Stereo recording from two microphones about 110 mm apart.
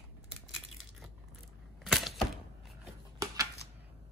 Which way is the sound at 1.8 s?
Centre (ahead or behind).